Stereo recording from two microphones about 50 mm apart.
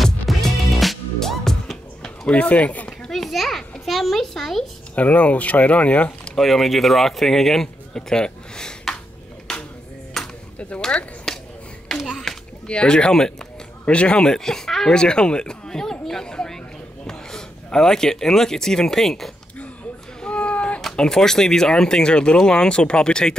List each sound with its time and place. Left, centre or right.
0.0 s music: centre
2.0 s speech: left
3.1 s a sound: centre
4.9 s speech: left
6.3 s speech: centre
9.5 s music: centre
10.2 s chop: centre
10.8 s speech: left
11.3 s a sound: centre
12.0 s children playing: centre
12.6 s speech: centre
20.2 s a sound: left
20.8 s speech: centre